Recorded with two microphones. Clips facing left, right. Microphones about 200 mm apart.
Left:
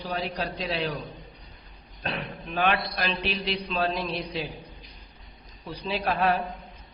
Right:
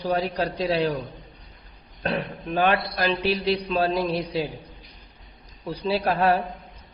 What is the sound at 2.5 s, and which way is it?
Speech, 45° right (ahead or behind).